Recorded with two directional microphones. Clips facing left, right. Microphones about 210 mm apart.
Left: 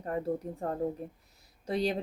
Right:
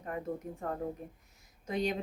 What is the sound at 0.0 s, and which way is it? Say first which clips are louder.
A woman's voice: left 5 dB; 35° left (ahead or behind).